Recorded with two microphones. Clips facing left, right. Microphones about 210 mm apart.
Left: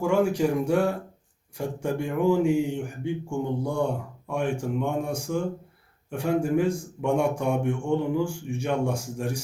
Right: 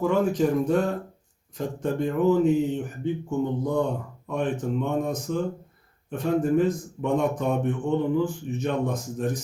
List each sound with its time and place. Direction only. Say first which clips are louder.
0.0 s speech: even; 10° left (ahead or behind)